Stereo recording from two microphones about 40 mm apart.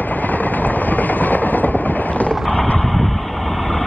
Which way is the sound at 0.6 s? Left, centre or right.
Left.